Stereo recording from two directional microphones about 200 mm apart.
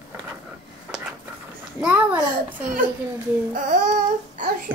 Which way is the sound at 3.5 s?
40° right (ahead or behind).